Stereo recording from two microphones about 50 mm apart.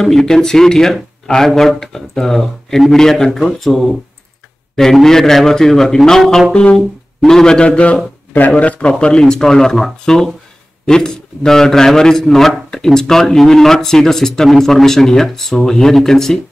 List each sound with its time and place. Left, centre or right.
0.0 s a man's voice: centre
6.5 s a man's voice: left
8.9 s a man's voice: centre